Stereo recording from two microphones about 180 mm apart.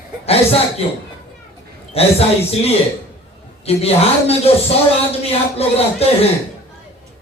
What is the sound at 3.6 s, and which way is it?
Speech, 35° left (ahead or behind).